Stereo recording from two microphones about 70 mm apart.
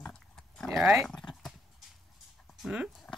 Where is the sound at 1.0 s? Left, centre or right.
Centre.